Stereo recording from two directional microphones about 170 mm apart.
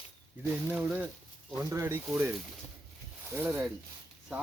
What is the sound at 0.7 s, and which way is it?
Speech, 10° right (ahead or behind).